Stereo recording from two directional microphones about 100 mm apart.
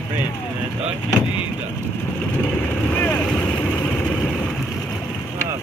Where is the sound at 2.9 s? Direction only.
20° left (ahead or behind).